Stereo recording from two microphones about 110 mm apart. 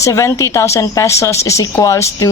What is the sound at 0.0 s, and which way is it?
Speech, 30° left (ahead or behind).